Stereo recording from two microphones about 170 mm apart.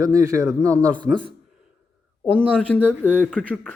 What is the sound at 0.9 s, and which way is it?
Speech, 5° left (ahead or behind).